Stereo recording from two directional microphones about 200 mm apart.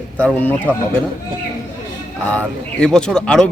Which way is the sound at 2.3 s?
5° left (ahead or behind).